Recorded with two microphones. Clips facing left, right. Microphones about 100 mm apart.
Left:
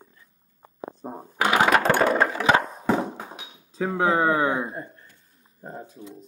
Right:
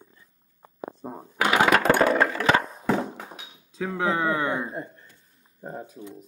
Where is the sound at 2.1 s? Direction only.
15° left (ahead or behind).